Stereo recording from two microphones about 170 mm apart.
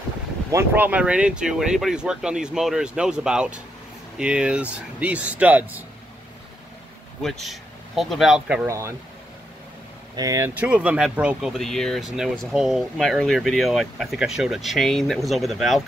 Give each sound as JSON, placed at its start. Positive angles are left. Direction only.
{"t": 0.5, "sound": "speech", "side_deg": -15}
{"t": 7.2, "sound": "speech", "side_deg": 0}
{"t": 8.6, "sound": "speech", "side_deg": -15}
{"t": 10.1, "sound": "speech", "side_deg": -20}